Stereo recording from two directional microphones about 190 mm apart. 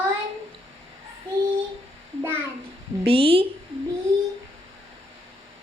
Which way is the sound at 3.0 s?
30° right (ahead or behind).